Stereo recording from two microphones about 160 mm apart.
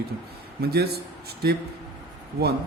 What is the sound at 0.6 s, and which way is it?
A man's voice, 80° right.